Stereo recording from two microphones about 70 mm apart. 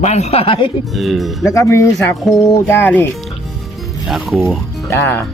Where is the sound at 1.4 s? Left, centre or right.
Left.